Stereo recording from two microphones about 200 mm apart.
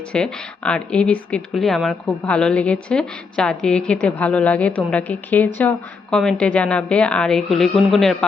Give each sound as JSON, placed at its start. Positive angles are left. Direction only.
{"t": 0.1, "sound": "speech", "side_deg": 5}